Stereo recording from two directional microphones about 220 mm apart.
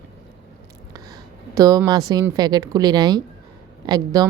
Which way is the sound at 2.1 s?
15° right (ahead or behind).